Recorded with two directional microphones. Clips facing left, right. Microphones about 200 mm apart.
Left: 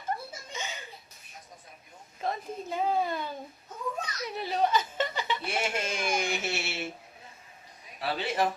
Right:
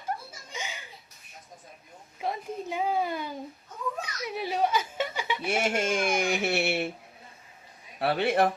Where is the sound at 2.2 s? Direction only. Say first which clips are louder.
Right 1 dB; 10° right (ahead or behind).